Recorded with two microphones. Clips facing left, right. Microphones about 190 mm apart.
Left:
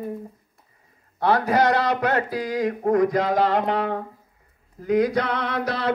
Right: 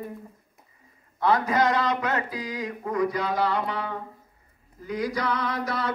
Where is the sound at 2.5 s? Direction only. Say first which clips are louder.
Left 11 dB; 70° left (ahead or behind).